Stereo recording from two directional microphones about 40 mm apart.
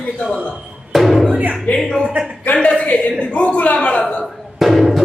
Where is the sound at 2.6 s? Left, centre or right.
Left.